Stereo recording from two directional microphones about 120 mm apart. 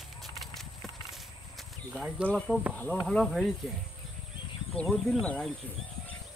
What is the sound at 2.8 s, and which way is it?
Speech, 5° left (ahead or behind).